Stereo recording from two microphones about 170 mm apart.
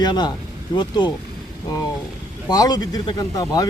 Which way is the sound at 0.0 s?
25° left (ahead or behind).